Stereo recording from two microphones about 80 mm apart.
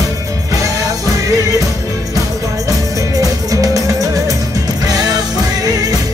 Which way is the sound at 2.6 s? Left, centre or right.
Right.